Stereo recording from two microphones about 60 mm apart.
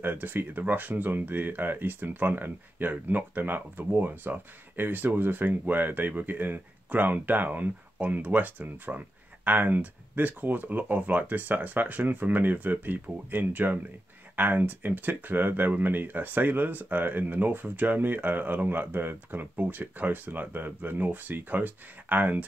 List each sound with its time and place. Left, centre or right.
0.0 s speech: right